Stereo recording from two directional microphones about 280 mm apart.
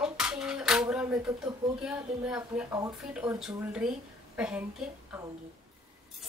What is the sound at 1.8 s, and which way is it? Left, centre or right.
A woman's voice, centre.